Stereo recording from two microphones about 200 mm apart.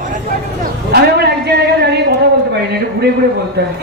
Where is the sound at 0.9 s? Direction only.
55° right (ahead or behind).